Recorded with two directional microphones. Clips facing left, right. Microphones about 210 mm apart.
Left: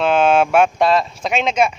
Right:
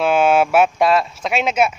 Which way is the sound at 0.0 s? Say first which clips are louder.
Even; 10° right (ahead or behind).